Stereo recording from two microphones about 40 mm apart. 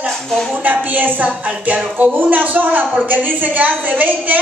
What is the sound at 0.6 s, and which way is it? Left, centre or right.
Speech, right.